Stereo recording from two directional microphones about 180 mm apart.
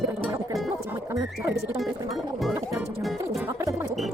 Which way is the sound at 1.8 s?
Centre (ahead or behind).